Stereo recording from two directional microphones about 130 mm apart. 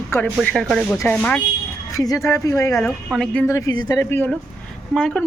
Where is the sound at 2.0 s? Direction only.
25° left (ahead or behind).